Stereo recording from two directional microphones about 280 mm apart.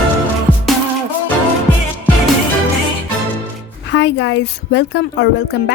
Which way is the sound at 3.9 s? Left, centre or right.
Left.